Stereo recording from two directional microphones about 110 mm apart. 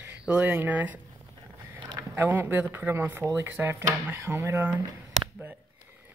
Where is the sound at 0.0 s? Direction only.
10° right (ahead or behind).